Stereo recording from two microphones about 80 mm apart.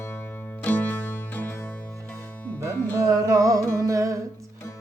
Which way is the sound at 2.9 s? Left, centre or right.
Right.